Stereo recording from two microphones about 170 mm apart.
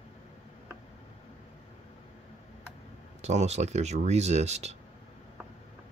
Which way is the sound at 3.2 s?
40° right (ahead or behind).